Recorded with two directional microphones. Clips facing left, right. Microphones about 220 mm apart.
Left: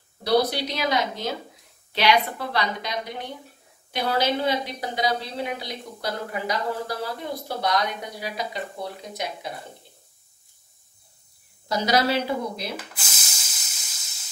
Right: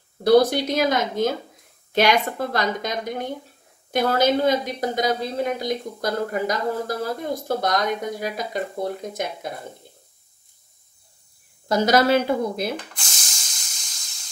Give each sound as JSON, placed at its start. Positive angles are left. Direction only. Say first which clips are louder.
{"t": 0.2, "sound": "a woman's voice", "louder": "right 6 dB", "side_deg": -50}
{"t": 11.7, "sound": "a woman's voice", "louder": "right 5 dB", "side_deg": -50}
{"t": 12.7, "sound": "spray", "louder": "right 3 dB", "side_deg": 5}